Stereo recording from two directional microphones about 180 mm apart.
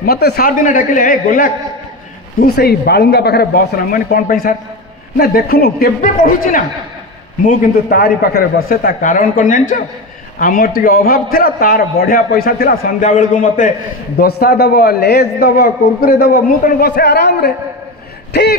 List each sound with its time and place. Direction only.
0.0 s a man's voice: 60° left (ahead or behind)
2.4 s a man's voice: 60° left (ahead or behind)
14.2 s speech: 60° left (ahead or behind)